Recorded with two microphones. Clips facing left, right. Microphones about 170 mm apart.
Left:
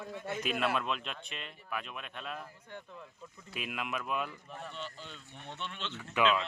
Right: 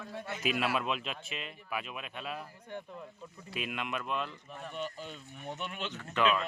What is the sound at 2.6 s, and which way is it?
Speech, 15° right (ahead or behind).